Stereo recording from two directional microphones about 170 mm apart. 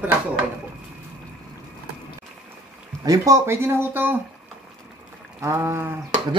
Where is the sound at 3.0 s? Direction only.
20° right (ahead or behind).